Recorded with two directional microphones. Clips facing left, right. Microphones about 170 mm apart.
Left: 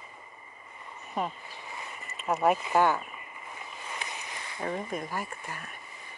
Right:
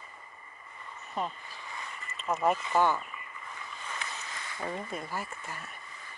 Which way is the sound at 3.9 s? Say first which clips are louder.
Left 1 dB; 15° left (ahead or behind).